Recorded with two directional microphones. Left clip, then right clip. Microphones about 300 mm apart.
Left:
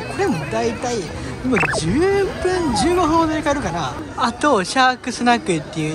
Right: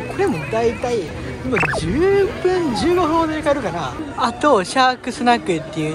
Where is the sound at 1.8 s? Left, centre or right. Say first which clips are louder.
Right 1 dB; centre.